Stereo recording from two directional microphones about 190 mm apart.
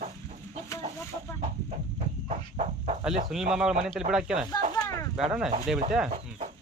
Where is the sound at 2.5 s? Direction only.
35° right (ahead or behind).